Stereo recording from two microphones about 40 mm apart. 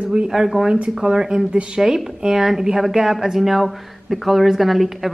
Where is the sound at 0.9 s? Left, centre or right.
Centre.